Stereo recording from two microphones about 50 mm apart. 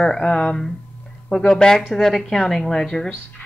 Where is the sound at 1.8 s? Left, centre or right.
Centre.